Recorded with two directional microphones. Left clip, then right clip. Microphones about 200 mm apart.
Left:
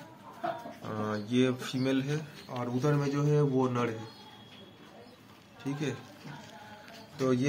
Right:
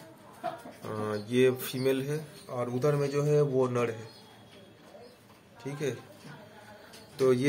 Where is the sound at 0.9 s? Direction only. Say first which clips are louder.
Right 1 dB; 20° right (ahead or behind).